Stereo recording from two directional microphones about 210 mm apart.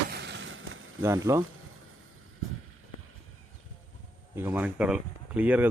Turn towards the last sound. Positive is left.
turn(degrees=-5)  # may be behind; listen again after turning